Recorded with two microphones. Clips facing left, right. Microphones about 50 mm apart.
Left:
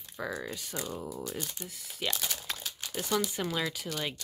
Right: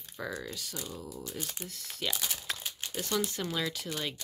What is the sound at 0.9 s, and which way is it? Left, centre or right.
Speech, left.